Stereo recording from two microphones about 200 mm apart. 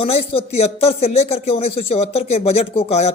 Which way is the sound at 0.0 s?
30° left (ahead or behind).